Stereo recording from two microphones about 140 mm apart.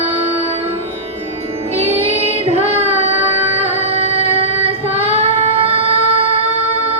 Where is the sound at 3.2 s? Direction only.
45° right (ahead or behind).